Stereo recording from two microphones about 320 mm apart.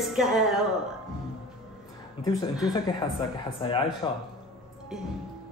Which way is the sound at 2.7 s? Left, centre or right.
Centre.